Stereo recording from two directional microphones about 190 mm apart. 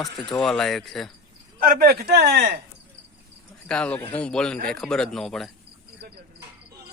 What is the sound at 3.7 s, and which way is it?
Speech, 5° left (ahead or behind).